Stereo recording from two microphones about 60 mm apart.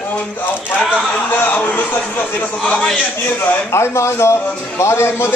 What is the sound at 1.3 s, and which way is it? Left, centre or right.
Speech, left.